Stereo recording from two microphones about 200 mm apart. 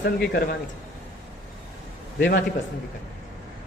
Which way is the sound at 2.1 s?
50° left (ahead or behind).